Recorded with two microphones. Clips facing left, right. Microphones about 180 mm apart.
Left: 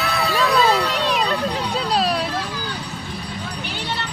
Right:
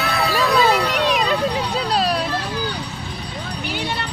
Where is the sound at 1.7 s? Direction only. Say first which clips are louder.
Even; centre (ahead or behind).